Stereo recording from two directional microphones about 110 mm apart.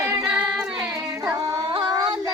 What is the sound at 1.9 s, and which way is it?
Singing, 45° right (ahead or behind).